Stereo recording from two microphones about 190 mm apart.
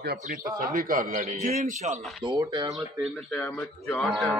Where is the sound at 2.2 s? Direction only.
20° right (ahead or behind).